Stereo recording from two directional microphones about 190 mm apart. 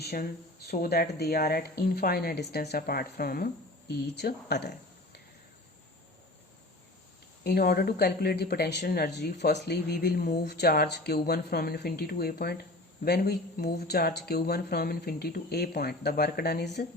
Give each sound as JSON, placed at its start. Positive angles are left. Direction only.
{"t": 0.0, "sound": "speech", "side_deg": 55}
{"t": 7.4, "sound": "speech", "side_deg": 55}